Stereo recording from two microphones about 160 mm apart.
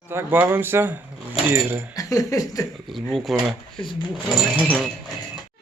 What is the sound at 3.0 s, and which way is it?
Speech, centre (ahead or behind).